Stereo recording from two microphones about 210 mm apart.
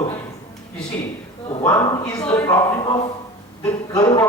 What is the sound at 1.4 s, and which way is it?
A man's voice, 15° left (ahead or behind).